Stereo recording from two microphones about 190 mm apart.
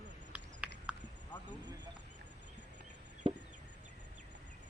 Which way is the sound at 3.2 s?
30° right (ahead or behind).